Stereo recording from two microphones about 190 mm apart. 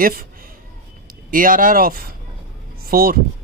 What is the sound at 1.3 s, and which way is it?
A man's voice, 45° right (ahead or behind).